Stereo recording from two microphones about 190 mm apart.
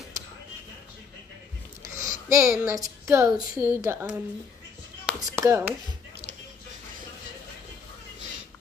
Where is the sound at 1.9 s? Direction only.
45° left (ahead or behind).